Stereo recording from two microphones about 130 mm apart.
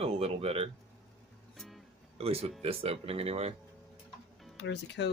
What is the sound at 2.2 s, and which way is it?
Speech, 50° right (ahead or behind).